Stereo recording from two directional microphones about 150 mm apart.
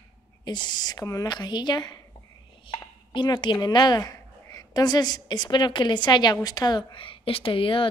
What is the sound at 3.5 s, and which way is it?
A woman's voice, 30° left (ahead or behind).